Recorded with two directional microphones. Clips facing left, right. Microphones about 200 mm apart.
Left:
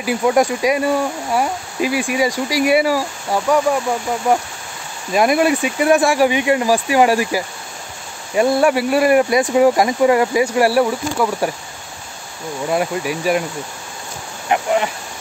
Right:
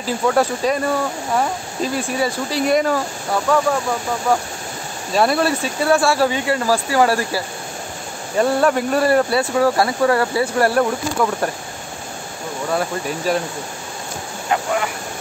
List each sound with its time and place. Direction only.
0.0 s speech: 15° left (ahead or behind)
5.1 s speech: 15° left (ahead or behind)
12.7 s speech: 10° left (ahead or behind)
14.5 s speech: 20° left (ahead or behind)